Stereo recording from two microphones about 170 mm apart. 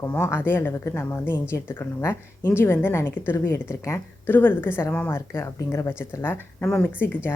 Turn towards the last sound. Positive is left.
turn(degrees=10)  # may be behind; listen again after turning